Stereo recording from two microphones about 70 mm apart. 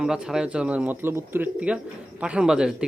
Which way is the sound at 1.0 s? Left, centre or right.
Right.